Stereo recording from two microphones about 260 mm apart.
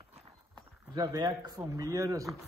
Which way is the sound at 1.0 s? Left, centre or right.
Centre.